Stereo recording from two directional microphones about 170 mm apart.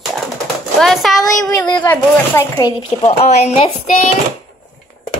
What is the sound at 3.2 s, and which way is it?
Speech, 40° left (ahead or behind).